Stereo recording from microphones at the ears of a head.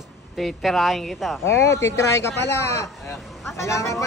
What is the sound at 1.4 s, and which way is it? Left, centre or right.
Speech, left.